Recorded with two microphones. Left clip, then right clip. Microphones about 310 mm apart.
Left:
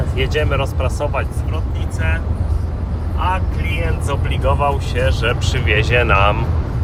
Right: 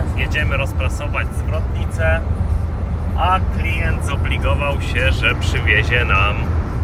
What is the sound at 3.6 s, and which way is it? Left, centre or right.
Speech, centre.